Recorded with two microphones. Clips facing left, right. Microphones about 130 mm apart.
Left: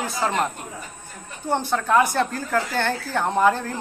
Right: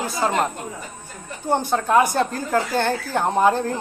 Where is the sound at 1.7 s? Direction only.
25° right (ahead or behind).